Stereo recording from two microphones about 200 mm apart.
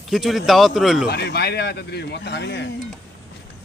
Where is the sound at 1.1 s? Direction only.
55° left (ahead or behind).